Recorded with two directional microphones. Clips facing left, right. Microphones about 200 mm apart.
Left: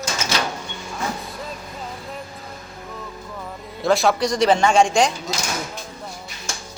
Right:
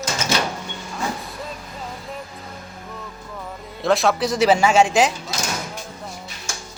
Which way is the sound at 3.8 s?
Centre (ahead or behind).